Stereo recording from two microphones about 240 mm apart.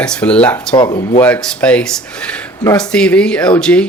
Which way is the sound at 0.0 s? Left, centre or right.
Centre.